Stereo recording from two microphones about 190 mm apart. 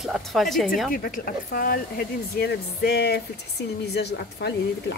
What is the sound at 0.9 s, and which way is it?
Speech, 50° left (ahead or behind).